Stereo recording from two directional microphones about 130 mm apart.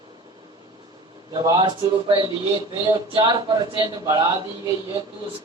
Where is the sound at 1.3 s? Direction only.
35° right (ahead or behind).